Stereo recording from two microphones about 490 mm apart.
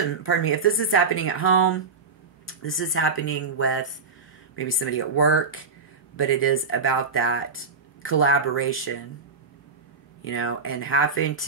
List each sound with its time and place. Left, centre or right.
0.2 s speech: left
10.2 s speech: left